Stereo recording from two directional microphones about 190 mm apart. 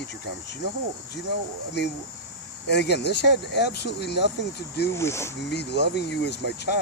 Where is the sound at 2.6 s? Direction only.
65° left (ahead or behind).